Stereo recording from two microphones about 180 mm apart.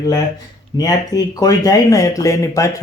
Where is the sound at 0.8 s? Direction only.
20° left (ahead or behind).